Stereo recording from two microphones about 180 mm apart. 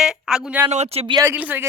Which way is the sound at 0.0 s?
5° right (ahead or behind).